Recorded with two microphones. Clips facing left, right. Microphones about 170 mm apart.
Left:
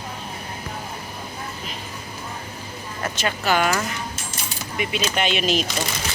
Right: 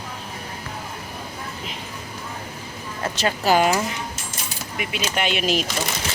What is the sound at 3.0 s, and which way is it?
Speech, 35° right (ahead or behind).